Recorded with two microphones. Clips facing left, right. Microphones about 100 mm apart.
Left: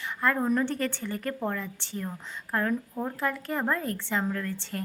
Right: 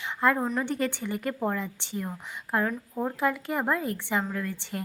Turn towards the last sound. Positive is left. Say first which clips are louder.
# even
turn(degrees=-15)  # may be behind; listen again after turning